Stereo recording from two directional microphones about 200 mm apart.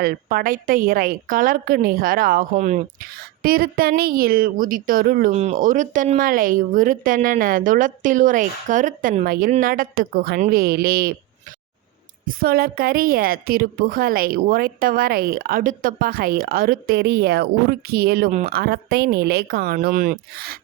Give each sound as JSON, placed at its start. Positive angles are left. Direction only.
{"t": 0.0, "sound": "a woman's voice", "side_deg": -45}
{"t": 12.4, "sound": "a woman's voice", "side_deg": -50}
{"t": 18.3, "sound": "speech", "side_deg": -35}
{"t": 18.5, "sound": "a woman's voice", "side_deg": -50}